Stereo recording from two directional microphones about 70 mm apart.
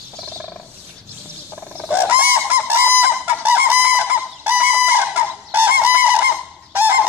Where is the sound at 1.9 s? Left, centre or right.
Right.